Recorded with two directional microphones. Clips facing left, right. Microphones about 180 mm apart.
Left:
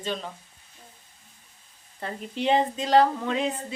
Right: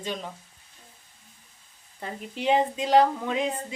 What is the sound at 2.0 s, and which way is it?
Speech, 10° right (ahead or behind).